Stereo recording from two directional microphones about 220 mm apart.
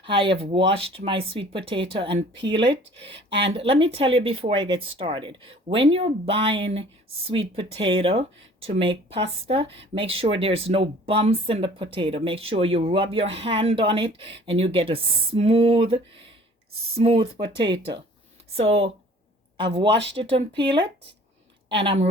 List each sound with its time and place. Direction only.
0.0 s speech: 25° right (ahead or behind)
17.7 s speech: 55° right (ahead or behind)
18.5 s speech: 25° right (ahead or behind)
19.9 s speech: 55° right (ahead or behind)
20.6 s speech: 20° right (ahead or behind)